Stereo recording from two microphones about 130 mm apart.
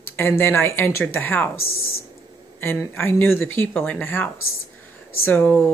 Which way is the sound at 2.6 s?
15° left (ahead or behind).